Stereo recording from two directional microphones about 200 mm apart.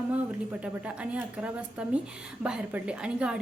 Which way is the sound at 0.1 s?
5° right (ahead or behind).